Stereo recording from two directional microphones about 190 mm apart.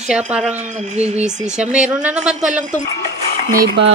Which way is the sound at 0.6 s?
35° right (ahead or behind).